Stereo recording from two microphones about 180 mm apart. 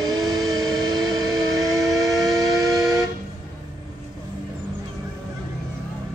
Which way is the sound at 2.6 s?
Centre (ahead or behind).